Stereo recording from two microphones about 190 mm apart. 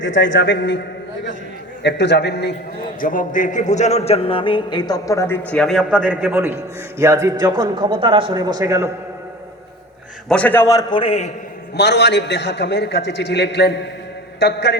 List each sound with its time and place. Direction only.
0.0 s a man's voice: 80° left
1.8 s a man's voice: 65° left (ahead or behind)
3.0 s a man's voice: 45° left (ahead or behind); by 5.4 s 15° left (ahead or behind)
5.5 s a man's voice: centre (ahead or behind); by 8.9 s 15° right (ahead or behind)
10.2 s a man's voice: 5° left (ahead or behind); by 11.3 s 30° left (ahead or behind)
11.8 s a man's voice: 60° left (ahead or behind)